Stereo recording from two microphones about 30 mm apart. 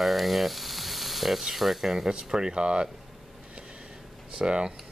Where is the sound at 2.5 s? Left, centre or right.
Right.